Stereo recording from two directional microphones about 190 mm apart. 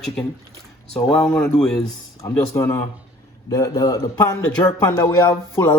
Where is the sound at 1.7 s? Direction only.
15° left (ahead or behind).